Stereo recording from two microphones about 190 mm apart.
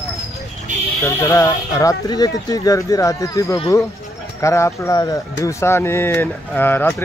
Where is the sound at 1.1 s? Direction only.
15° left (ahead or behind).